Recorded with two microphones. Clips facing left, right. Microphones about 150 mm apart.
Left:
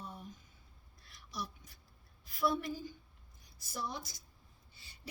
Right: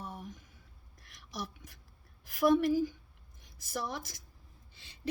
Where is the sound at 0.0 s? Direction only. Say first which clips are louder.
Right 4 dB; 85° right.